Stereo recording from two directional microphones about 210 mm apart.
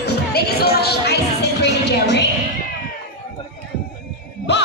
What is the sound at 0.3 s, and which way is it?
Speech, 50° left (ahead or behind).